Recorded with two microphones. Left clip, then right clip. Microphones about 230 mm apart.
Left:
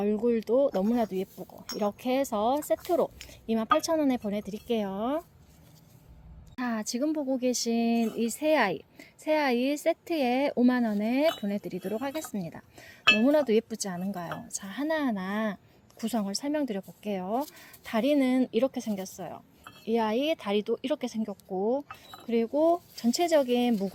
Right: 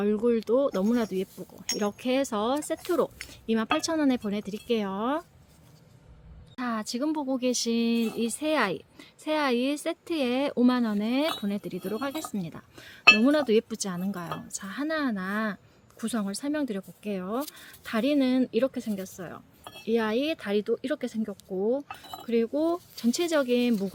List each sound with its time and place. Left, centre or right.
0.0 s speech: centre
6.6 s speech: centre
14.7 s a woman's voice: right
16.4 s speech: centre
17.9 s speech: centre
19.8 s speech: centre
20.3 s speech: right
21.6 s speech: centre